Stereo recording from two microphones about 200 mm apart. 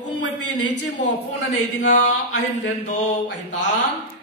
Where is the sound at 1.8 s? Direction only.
35° left (ahead or behind).